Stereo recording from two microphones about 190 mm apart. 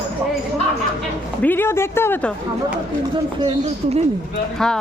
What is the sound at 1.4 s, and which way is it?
Speech, 10° left (ahead or behind).